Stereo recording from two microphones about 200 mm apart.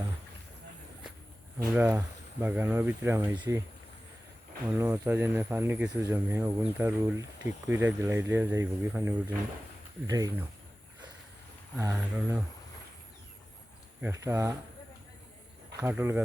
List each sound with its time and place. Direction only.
1.5 s speech: 10° right (ahead or behind)
3.3 s speech: 20° right (ahead or behind)
4.8 s speech: 10° right (ahead or behind)
11.8 s speech: 10° right (ahead or behind)
14.0 s speech: 15° right (ahead or behind)
15.8 s speech: 10° right (ahead or behind)